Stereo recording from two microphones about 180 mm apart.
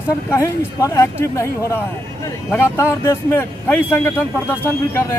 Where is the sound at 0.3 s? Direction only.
15° left (ahead or behind).